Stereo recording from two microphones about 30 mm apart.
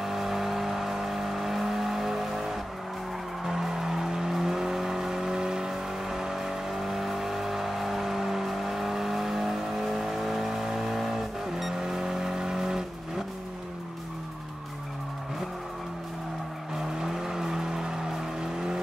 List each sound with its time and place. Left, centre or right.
0.0 s vehicle: centre
17.1 s vehicle: centre